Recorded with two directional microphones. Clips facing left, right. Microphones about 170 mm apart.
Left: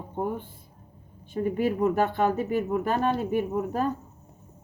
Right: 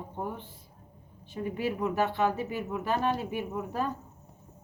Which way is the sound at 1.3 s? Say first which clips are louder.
Left 6 dB; 50° left (ahead or behind).